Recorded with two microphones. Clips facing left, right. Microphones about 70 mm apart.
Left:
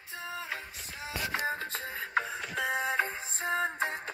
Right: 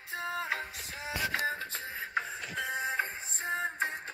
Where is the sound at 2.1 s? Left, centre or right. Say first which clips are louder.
Left 4 dB; left.